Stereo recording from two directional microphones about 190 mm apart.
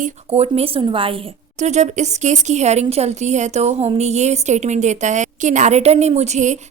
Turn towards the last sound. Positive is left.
turn(degrees=-40)  # may be behind; listen again after turning